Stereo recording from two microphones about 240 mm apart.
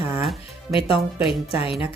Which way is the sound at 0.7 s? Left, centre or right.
Left.